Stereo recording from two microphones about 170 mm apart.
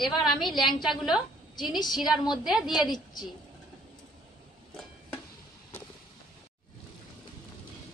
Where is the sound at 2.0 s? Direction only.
Centre (ahead or behind).